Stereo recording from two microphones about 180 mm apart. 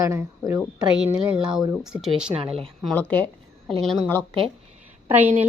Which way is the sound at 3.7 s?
5° right (ahead or behind).